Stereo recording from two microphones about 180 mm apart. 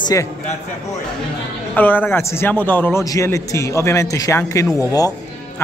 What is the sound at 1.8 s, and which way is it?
A man's voice, 10° left (ahead or behind).